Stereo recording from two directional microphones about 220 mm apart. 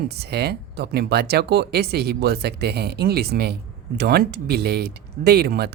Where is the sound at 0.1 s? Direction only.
50° right (ahead or behind).